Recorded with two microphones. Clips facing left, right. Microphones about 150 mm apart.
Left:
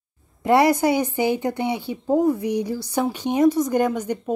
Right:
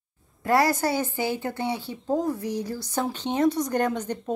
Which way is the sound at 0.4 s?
20° left (ahead or behind).